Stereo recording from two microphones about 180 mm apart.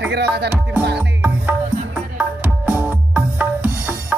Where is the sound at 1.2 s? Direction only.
5° right (ahead or behind).